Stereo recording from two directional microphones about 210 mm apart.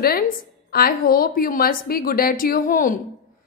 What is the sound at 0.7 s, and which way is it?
A woman's voice, 45° left (ahead or behind).